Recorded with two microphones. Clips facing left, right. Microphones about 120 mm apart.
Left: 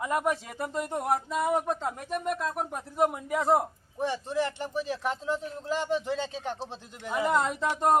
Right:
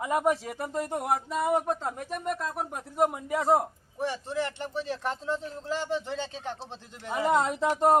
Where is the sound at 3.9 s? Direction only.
20° left (ahead or behind).